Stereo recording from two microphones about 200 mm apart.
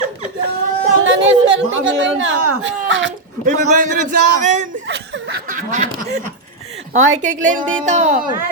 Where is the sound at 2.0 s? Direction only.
70° right (ahead or behind).